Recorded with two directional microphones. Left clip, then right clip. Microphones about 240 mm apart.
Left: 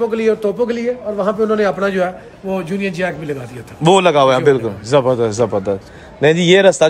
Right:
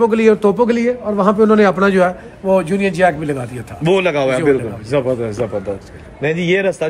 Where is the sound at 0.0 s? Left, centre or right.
Centre.